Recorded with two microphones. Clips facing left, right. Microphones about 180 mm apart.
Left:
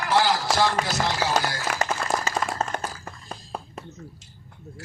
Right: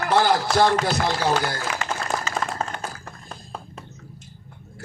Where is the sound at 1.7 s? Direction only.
55° left (ahead or behind).